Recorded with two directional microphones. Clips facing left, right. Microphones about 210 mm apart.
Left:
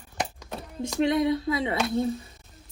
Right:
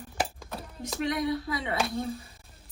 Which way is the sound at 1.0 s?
25° left (ahead or behind).